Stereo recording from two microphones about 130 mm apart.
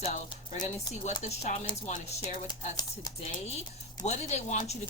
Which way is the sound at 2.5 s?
35° left (ahead or behind).